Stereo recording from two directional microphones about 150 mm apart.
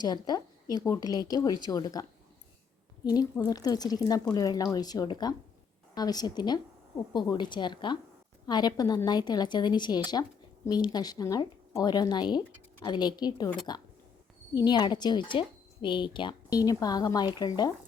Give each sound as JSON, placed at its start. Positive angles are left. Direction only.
{"t": 0.0, "sound": "speech", "side_deg": 25}